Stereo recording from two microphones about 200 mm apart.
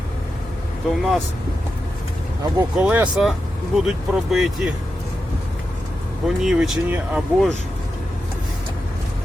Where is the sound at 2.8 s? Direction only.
5° right (ahead or behind).